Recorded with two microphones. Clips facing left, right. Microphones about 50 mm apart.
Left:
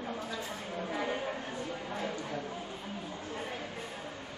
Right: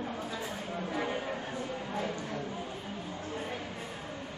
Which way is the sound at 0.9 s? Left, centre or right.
Centre.